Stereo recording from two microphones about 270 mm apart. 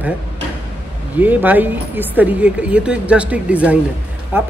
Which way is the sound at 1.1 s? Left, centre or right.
Centre.